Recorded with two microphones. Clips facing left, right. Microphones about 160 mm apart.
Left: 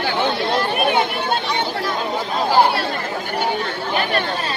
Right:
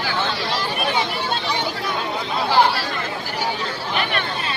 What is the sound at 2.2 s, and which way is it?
Chatter, 45° left (ahead or behind).